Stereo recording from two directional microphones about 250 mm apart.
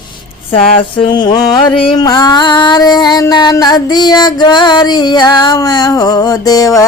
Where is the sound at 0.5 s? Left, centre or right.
Left.